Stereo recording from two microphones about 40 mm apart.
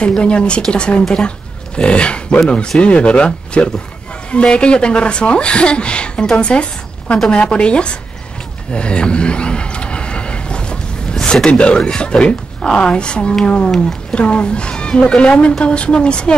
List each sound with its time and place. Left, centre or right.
0.2 s speech: left
8.7 s a sound: left
11.5 s speech: left